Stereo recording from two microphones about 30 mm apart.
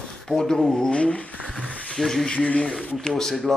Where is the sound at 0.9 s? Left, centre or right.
Left.